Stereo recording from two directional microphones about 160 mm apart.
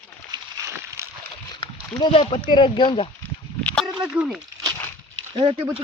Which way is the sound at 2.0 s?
35° left (ahead or behind).